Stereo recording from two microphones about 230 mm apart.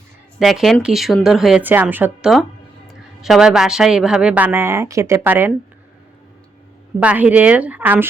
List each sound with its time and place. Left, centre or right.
0.3 s speech: centre
7.0 s speech: centre